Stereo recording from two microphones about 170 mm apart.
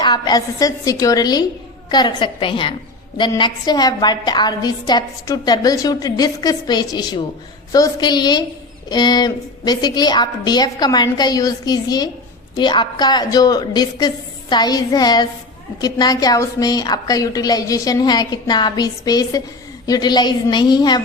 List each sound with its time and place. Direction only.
0.0 s a woman's voice: 25° left (ahead or behind)